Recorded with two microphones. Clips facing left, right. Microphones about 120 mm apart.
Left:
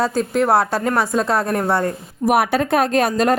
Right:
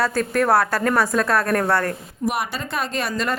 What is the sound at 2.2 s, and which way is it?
Speech, 60° left (ahead or behind).